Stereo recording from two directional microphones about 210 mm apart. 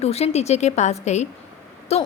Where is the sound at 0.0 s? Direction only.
30° left (ahead or behind).